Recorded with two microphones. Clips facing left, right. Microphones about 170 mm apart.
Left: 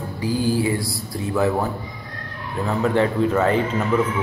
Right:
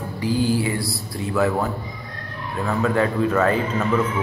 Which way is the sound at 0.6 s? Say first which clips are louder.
Left 2 dB; 20° left (ahead or behind).